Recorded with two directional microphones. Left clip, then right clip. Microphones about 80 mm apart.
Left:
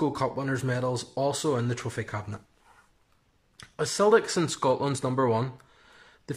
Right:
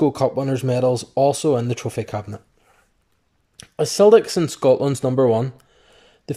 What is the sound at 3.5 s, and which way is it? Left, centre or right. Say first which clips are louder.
Speech: right 9 dB; right.